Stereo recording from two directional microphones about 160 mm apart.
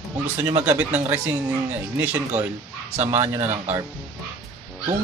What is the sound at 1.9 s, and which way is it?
Speech, 10° right (ahead or behind).